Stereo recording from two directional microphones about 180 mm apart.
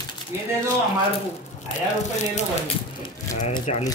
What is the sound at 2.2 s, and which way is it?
Speech, 40° left (ahead or behind).